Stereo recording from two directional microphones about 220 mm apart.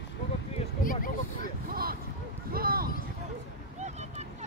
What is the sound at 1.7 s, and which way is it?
Boat, 40° right (ahead or behind).